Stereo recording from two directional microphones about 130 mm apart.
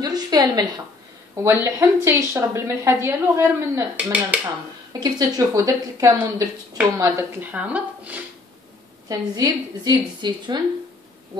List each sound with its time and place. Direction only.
0.0 s a sound: 30° right (ahead or behind)
1.4 s a woman's voice: 20° right (ahead or behind)
5.0 s a woman's voice: 25° right (ahead or behind)
7.5 s speech: 10° right (ahead or behind)
9.1 s a woman's voice: 30° right (ahead or behind)